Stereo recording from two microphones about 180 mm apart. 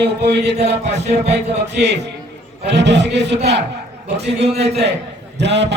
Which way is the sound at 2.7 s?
70° right (ahead or behind).